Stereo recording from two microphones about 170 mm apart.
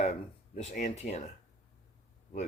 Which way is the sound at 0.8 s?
45° left (ahead or behind).